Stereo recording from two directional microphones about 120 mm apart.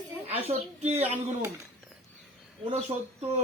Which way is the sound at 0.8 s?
60° right (ahead or behind).